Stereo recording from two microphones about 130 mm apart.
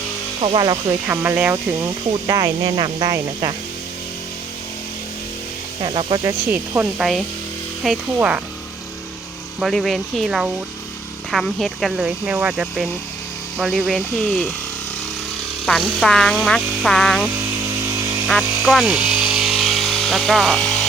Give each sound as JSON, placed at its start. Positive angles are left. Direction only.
{"t": 0.4, "sound": "speech", "side_deg": -35}
{"t": 1.0, "sound": "speech", "side_deg": -15}
{"t": 2.2, "sound": "speech", "side_deg": -30}
{"t": 5.8, "sound": "speech", "side_deg": -40}
{"t": 7.9, "sound": "speech", "side_deg": -10}
{"t": 9.6, "sound": "speech", "side_deg": 0}
{"t": 15.6, "sound": "speech", "side_deg": 0}
{"t": 18.3, "sound": "electric toothbrush", "side_deg": 0}